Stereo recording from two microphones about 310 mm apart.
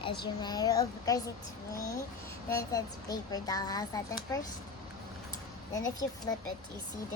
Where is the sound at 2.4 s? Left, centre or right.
Centre.